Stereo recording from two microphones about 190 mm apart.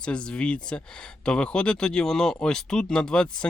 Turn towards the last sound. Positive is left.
turn(degrees=5)  # may be behind; listen again after turning